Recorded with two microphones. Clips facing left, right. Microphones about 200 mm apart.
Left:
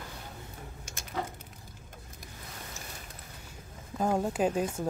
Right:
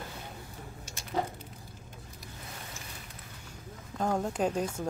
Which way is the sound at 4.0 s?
5° left (ahead or behind).